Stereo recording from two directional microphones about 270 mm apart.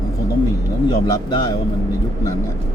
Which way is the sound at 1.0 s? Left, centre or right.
Centre.